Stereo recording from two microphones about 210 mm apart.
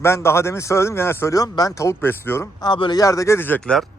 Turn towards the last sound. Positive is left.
turn(degrees=5)  # may be behind; listen again after turning